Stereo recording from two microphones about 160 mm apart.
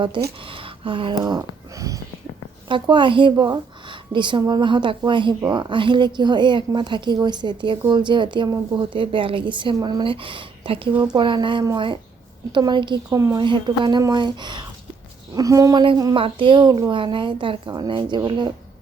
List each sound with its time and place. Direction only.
0.2 s a woman's voice: 30° right (ahead or behind)
0.5 s a sound: 35° right (ahead or behind)
2.6 s a woman's voice: 30° right (ahead or behind)